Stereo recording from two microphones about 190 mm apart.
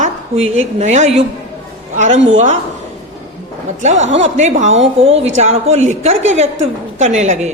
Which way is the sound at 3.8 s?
35° right (ahead or behind).